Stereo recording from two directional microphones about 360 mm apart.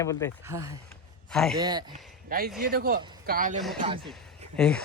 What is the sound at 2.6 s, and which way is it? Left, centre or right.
Speech, right.